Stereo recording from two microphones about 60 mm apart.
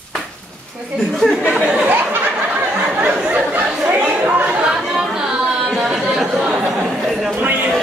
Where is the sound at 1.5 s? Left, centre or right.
Centre.